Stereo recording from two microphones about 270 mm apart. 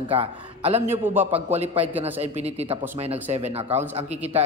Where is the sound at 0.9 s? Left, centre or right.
Centre.